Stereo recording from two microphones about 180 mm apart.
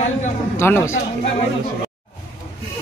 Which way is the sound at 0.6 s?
15° left (ahead or behind).